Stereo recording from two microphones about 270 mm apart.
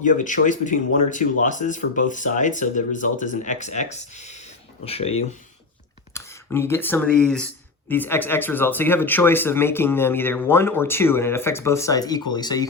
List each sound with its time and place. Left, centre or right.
0.0 s speech: left
6.1 s speech: centre